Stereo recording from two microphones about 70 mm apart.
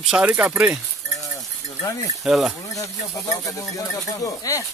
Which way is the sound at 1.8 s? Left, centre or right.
Left.